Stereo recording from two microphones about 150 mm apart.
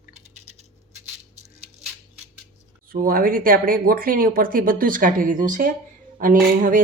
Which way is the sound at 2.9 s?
75° right (ahead or behind).